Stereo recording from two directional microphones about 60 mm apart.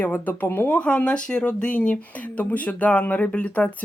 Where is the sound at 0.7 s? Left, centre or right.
Centre.